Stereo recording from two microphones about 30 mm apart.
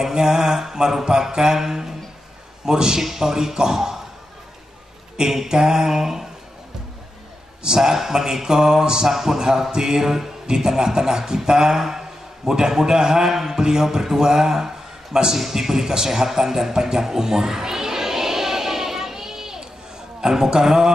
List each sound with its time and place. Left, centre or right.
0.0 s mantra: centre
2.6 s speech: right
3.0 s mantra: centre
5.1 s mantra: centre
7.6 s speech: centre
13.6 s mantra: centre
17.5 s a sound: centre
20.2 s speech: right